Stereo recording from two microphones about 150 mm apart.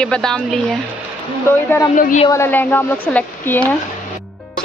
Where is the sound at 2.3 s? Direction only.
15° left (ahead or behind).